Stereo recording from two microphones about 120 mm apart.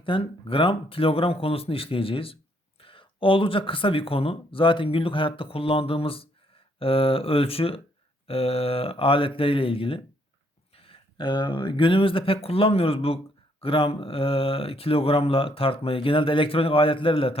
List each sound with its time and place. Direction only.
0.0 s speech: 45° left (ahead or behind)